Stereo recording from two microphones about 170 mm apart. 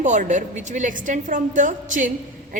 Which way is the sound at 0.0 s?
45° right (ahead or behind).